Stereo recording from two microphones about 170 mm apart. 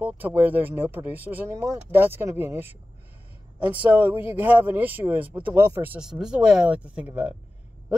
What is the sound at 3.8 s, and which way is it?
Speech, 10° right (ahead or behind).